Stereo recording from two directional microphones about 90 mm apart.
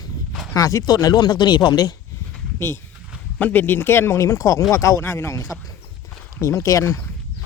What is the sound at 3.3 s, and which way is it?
Speech, 15° left (ahead or behind).